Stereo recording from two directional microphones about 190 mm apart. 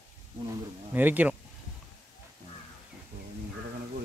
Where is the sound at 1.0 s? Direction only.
10° right (ahead or behind).